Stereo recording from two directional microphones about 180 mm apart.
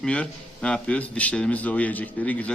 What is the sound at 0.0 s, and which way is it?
A man's voice, 5° left (ahead or behind).